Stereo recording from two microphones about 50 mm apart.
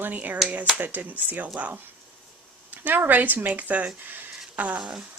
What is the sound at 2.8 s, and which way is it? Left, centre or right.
Speech, right.